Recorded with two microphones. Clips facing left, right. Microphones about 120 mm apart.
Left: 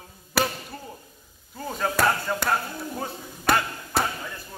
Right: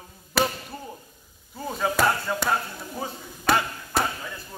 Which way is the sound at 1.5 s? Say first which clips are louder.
Right 1 dB; 5° right (ahead or behind).